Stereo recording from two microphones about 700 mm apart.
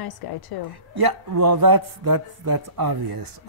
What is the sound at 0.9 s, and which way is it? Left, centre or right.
Speech, right.